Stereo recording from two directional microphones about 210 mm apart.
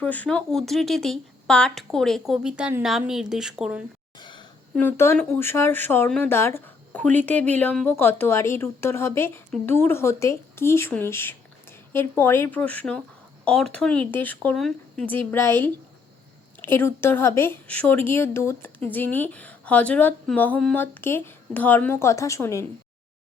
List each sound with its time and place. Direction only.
0.0 s speech: 5° left (ahead or behind)
4.2 s a sound: 20° left (ahead or behind)
4.7 s speech: 10° left (ahead or behind)